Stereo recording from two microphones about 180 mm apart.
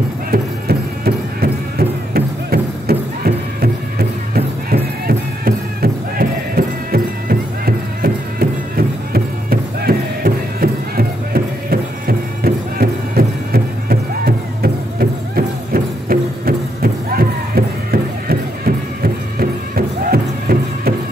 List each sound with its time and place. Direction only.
0.3 s music: 60° right (ahead or behind)
19.7 s music: 55° right (ahead or behind)